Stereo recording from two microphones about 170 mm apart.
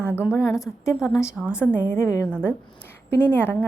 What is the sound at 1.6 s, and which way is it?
A woman's voice, 15° left (ahead or behind).